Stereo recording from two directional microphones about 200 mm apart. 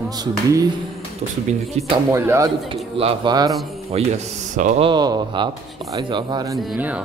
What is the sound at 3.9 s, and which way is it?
A man's voice, 30° right (ahead or behind).